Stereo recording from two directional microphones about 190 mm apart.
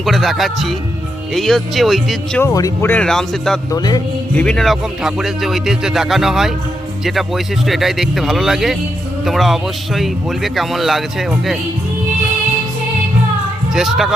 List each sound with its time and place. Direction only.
0.0 s a man's voice: centre (ahead or behind)
2.4 s speech: 20° left (ahead or behind); by 3.6 s centre (ahead or behind)
3.7 s music: 20° left (ahead or behind)
4.4 s a man's voice: 5° left (ahead or behind)
13.7 s a man's voice: centre (ahead or behind)